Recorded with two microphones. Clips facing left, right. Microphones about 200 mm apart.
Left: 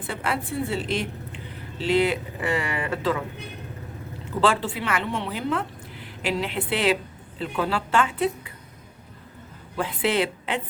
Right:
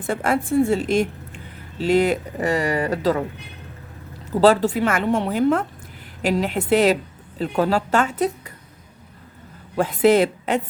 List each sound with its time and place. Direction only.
0.0 s a woman's voice: 45° right (ahead or behind)
4.3 s a woman's voice: 40° right (ahead or behind)
9.7 s a woman's voice: 45° right (ahead or behind)